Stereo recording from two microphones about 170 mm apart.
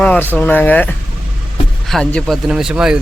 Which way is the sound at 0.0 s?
10° left (ahead or behind).